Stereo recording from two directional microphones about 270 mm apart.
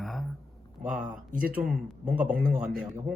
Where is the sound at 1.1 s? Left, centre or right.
Right.